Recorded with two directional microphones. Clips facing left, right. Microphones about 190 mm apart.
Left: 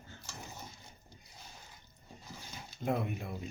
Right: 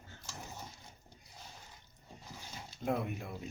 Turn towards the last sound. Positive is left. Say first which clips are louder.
# left 1 dB
turn(degrees=0)  # may be behind; listen again after turning